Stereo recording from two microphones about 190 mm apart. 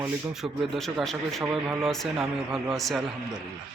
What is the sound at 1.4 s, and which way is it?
Speech, 15° right (ahead or behind).